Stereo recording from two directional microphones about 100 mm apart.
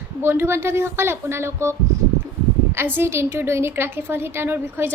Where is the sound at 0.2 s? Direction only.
25° right (ahead or behind).